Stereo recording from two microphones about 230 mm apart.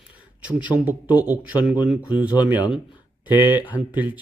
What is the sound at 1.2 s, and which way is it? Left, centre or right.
Speech, centre.